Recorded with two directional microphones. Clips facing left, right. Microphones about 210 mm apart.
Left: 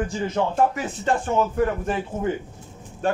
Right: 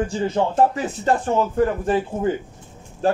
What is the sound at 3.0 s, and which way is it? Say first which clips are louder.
Speech: right 4 dB; 35° right (ahead or behind).